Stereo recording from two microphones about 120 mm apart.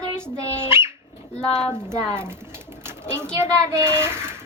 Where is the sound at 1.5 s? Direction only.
5° left (ahead or behind).